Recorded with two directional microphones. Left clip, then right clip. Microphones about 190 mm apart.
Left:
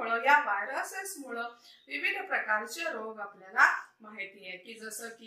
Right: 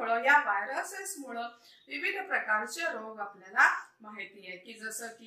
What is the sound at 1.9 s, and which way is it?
Speech, 15° left (ahead or behind).